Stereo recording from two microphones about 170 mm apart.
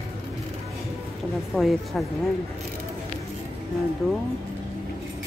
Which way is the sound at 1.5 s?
Centre (ahead or behind).